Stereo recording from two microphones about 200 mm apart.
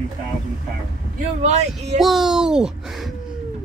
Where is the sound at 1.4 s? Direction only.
35° right (ahead or behind).